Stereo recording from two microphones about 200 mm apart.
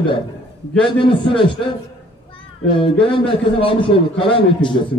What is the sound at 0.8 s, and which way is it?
Speech, 25° left (ahead or behind).